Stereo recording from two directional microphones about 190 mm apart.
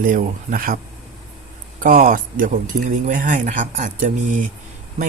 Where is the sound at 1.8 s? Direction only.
45° right (ahead or behind).